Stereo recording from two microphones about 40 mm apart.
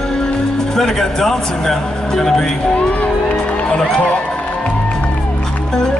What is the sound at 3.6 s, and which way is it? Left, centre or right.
Speech, centre.